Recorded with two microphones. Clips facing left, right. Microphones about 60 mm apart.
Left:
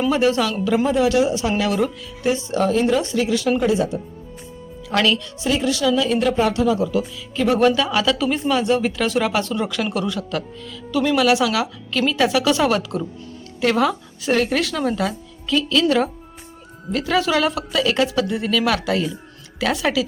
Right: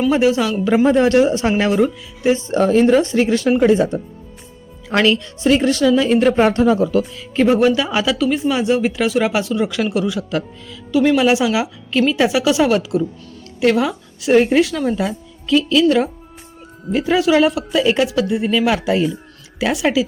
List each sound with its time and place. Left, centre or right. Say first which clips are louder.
0.1 s speech: right 2 dB; centre
0.9 s speech: right 5 dB; right
1.8 s speech: right 4 dB; right
2.5 s speech: right 6 dB; right
4.9 s speech: right 4 dB; right
5.5 s speech: right 5 dB; right
6.3 s speech: right 4 dB; right
7.8 s speech: right 1 dB; centre
8.1 s a woman's voice: right 2 dB; centre
14.3 s a woman's voice: right 8 dB; centre
18.3 s speech: right 3 dB; centre